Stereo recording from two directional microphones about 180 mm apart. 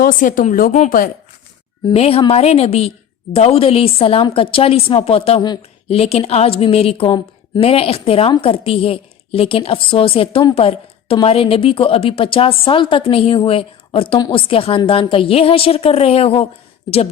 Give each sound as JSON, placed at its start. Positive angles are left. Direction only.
{"t": 0.0, "sound": "a woman's voice", "side_deg": 50}
{"t": 1.9, "sound": "a woman's voice", "side_deg": 35}